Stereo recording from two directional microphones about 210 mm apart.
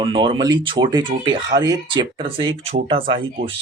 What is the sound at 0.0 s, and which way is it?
Speech, 25° right (ahead or behind).